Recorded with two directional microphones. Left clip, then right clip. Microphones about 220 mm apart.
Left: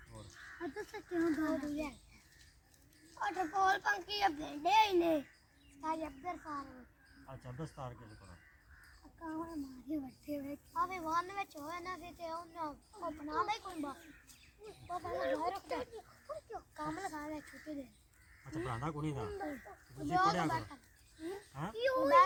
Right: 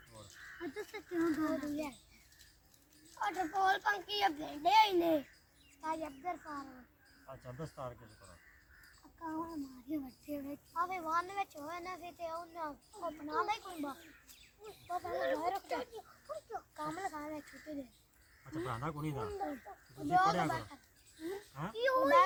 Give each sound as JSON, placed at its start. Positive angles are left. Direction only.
{"t": 0.8, "sound": "speech", "side_deg": -15}
{"t": 3.2, "sound": "a child's voice", "side_deg": -20}
{"t": 5.8, "sound": "a child's voice", "side_deg": -5}
{"t": 9.9, "sound": "speech", "side_deg": -15}
{"t": 10.8, "sound": "a child's voice", "side_deg": 0}
{"t": 16.7, "sound": "a child's voice", "side_deg": 0}
{"t": 21.8, "sound": "speech", "side_deg": -15}